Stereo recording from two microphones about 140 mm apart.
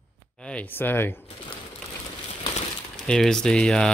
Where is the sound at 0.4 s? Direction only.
10° left (ahead or behind).